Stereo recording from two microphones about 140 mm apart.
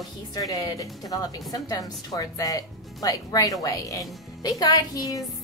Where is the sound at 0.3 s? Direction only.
25° left (ahead or behind).